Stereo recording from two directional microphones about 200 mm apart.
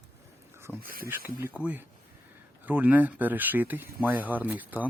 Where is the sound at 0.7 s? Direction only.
45° right (ahead or behind).